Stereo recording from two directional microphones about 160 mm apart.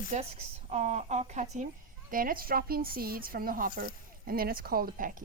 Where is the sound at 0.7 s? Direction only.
45° right (ahead or behind).